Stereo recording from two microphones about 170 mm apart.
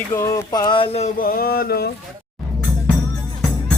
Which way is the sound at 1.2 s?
60° left (ahead or behind).